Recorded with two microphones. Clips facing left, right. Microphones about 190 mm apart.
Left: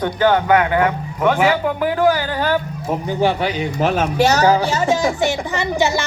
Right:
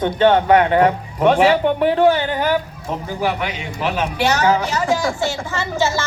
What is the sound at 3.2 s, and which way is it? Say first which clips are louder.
Music: left 5 dB; 30° left (ahead or behind).